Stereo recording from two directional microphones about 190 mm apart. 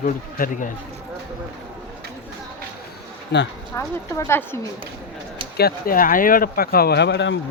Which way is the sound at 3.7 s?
15° left (ahead or behind).